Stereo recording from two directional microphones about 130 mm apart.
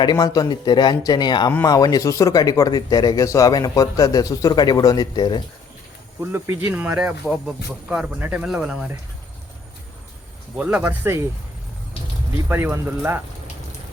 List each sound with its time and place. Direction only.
0.0 s a man's voice: 35° left (ahead or behind)
6.1 s speech: 20° right (ahead or behind)
10.6 s speech: 10° right (ahead or behind)
12.5 s speech: 15° right (ahead or behind)